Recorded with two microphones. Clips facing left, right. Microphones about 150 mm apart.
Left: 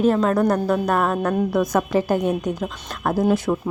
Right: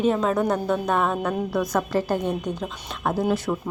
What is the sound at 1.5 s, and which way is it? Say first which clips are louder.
A woman's voice: left 2 dB; 15° left (ahead or behind).